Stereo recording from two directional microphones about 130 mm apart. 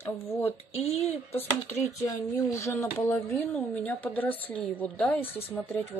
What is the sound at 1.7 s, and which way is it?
Speech, 60° left (ahead or behind).